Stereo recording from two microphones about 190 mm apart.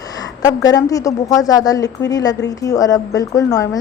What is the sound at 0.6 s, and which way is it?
A woman's voice, 20° left (ahead or behind).